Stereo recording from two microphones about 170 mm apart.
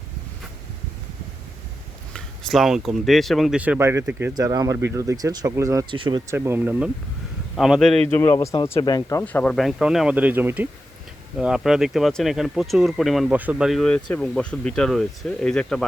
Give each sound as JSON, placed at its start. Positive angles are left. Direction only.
{"t": 2.1, "sound": "speech", "side_deg": 0}
{"t": 6.3, "sound": "speech", "side_deg": -15}
{"t": 8.1, "sound": "speech", "side_deg": 15}